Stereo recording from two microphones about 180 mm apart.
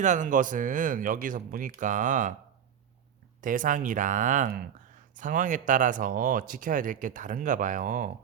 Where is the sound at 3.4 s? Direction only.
45° right (ahead or behind).